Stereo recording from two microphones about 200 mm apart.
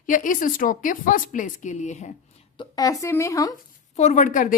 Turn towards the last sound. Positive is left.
turn(degrees=40)  # may be behind; listen again after turning